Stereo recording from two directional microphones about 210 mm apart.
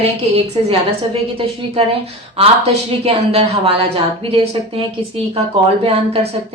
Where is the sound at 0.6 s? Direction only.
25° right (ahead or behind).